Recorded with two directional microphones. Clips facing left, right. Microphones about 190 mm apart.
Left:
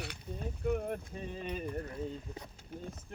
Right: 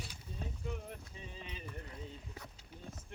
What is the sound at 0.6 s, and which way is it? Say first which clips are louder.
Speech: left 15 dB; 55° left (ahead or behind).